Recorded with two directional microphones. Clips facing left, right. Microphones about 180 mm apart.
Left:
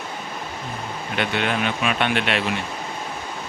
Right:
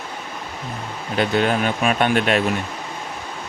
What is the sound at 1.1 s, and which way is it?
Speech, 40° right (ahead or behind).